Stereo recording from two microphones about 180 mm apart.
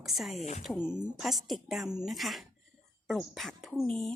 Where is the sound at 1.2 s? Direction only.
Centre (ahead or behind).